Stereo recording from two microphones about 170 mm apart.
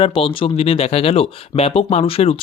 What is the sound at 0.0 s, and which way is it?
Speech, 35° left (ahead or behind).